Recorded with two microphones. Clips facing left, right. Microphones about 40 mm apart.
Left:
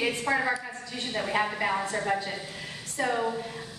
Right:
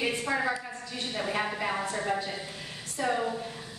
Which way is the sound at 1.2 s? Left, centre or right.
Centre.